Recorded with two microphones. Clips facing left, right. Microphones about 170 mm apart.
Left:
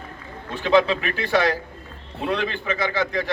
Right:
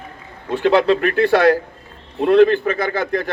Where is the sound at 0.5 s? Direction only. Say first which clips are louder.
Right 4 dB; 55° right (ahead or behind).